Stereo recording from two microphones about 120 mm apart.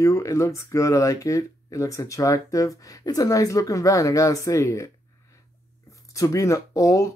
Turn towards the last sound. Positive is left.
turn(degrees=25)  # may be behind; listen again after turning